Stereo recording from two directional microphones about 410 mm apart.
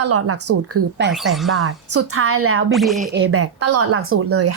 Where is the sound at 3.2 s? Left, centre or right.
Right.